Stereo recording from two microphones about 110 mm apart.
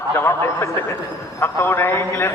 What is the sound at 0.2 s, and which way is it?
A man's voice, 25° left (ahead or behind).